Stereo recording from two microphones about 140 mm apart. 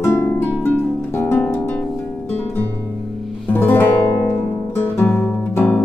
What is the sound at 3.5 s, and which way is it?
Music, 15° left (ahead or behind).